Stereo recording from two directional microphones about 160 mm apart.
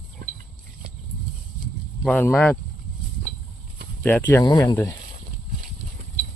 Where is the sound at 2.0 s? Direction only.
10° left (ahead or behind).